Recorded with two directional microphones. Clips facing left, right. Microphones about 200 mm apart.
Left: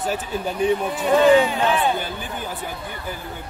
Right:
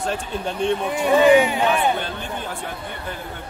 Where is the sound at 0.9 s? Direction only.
10° right (ahead or behind).